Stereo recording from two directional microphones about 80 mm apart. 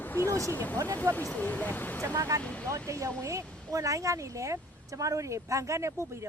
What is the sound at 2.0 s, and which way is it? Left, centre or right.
Speech, right.